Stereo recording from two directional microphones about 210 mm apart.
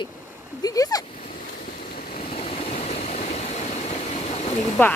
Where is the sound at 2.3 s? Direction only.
30° left (ahead or behind).